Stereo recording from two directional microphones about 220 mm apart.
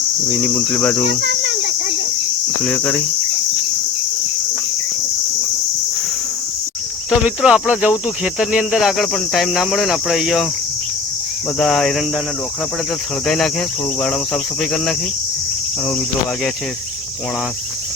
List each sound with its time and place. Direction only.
0.4 s speech: 5° left (ahead or behind)
1.2 s a sound: 50° right (ahead or behind)
2.6 s speech: 5° left (ahead or behind)
7.1 s speech: 5° right (ahead or behind)
11.6 s speech: centre (ahead or behind)
13.2 s speech: centre (ahead or behind)
14.6 s speech: centre (ahead or behind)